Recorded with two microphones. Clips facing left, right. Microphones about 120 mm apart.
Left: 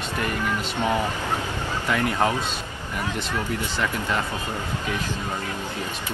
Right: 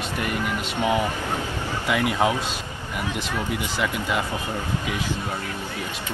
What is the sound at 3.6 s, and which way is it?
Speech, 10° right (ahead or behind).